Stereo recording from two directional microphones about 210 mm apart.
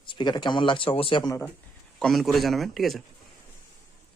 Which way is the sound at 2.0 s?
Centre (ahead or behind).